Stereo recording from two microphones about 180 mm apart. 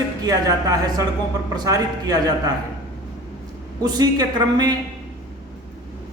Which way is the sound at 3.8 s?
20° right (ahead or behind).